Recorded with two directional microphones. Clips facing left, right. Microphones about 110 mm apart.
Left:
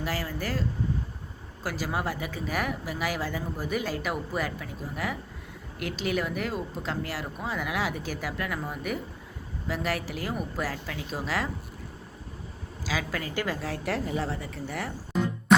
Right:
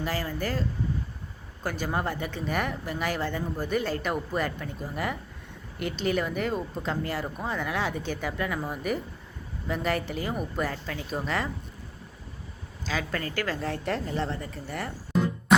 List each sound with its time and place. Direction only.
0.0 s speech: 5° left (ahead or behind)
1.6 s speech: 5° left (ahead or behind)
12.8 s speech: 5° left (ahead or behind)
13.3 s a woman's voice: 15° left (ahead or behind)
13.6 s speech: centre (ahead or behind)